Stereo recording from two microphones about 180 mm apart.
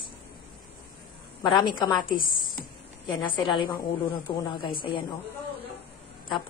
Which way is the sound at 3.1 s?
25° left (ahead or behind).